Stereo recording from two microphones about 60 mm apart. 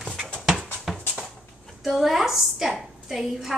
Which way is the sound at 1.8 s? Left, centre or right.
Centre.